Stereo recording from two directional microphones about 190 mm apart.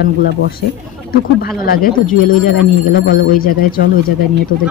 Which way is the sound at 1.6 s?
50° left (ahead or behind).